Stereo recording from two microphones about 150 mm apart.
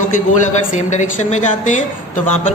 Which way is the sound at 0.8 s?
50° left (ahead or behind).